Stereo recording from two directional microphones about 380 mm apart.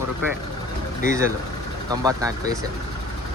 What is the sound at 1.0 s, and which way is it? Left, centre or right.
Speech, centre.